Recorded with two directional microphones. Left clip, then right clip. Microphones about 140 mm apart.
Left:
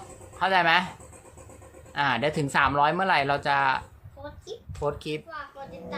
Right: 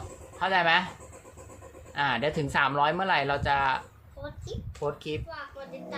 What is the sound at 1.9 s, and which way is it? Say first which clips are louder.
Speech: left 2 dB; 30° left (ahead or behind).